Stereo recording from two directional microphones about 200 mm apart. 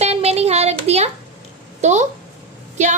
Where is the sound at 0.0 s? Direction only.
30° right (ahead or behind).